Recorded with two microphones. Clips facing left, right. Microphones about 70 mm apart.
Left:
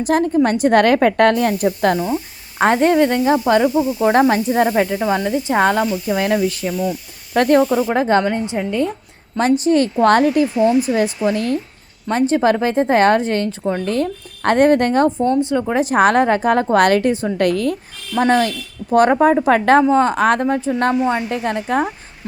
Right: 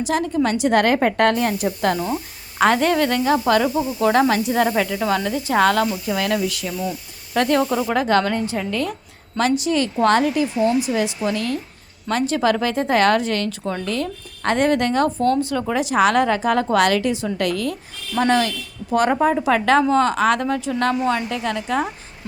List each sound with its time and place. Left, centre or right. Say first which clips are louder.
0.0 s a woman's voice: left 5 dB; left
2.0 s speech: left 3 dB; centre
2.6 s speech: left 3 dB; left
4.9 s speech: left 3 dB; centre; by 7.6 s left
7.6 s speech: left 4 dB; centre
7.9 s speech: even; left
9.4 s speech: left 5 dB; left
15.2 s speech: left 3 dB; centre
15.8 s speech: left 3 dB; left
18.2 s speech: left 3 dB; left
19.8 s speech: left 3 dB; left
20.1 s speech: left 3 dB; left